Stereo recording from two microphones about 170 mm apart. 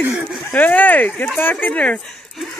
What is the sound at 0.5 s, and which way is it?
Speech, 10° left (ahead or behind).